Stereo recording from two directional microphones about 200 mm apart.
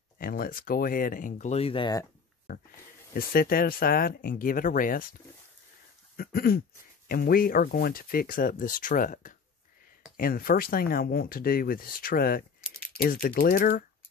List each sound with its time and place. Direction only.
0.2 s speech: 45° left (ahead or behind); by 2.0 s 20° left (ahead or behind)
3.2 s speech: 45° left (ahead or behind)
6.1 s a sound: 50° left (ahead or behind)
7.1 s speech: 45° left (ahead or behind)